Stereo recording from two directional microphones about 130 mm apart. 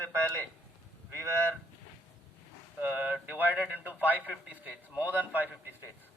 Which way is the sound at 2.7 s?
10° right (ahead or behind).